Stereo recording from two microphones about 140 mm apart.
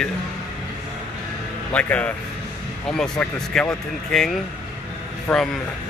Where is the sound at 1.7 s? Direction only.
10° left (ahead or behind).